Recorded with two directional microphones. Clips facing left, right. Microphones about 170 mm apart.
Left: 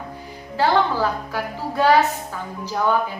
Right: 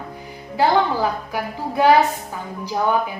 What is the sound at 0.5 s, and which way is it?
A woman's voice, 15° right (ahead or behind).